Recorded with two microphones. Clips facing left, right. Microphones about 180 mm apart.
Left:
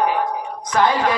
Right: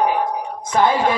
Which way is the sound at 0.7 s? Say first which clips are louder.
Right 1 dB; 25° right (ahead or behind).